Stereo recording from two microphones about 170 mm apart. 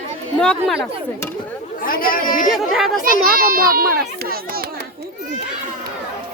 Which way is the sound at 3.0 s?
55° right (ahead or behind).